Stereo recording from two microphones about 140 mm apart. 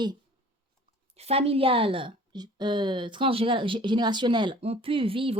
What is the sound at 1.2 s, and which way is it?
Speech, 45° right (ahead or behind).